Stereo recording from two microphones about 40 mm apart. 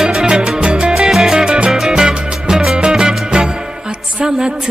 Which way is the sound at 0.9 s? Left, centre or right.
Centre.